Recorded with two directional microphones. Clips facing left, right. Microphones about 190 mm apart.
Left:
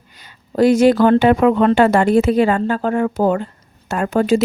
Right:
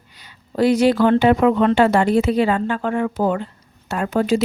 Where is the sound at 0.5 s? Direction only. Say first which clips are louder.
Left 4 dB; 45° left (ahead or behind).